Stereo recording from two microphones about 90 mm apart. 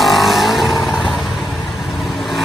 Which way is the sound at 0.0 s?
Centre (ahead or behind).